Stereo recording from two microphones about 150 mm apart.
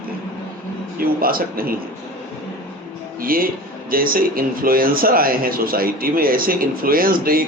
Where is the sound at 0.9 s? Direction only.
75° right (ahead or behind).